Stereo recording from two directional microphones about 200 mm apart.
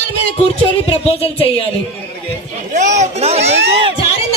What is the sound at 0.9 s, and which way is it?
Music, 25° left (ahead or behind).